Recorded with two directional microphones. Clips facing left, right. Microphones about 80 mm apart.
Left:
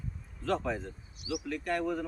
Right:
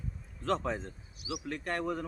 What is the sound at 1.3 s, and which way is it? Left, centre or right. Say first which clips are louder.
Speech: left 3 dB; right.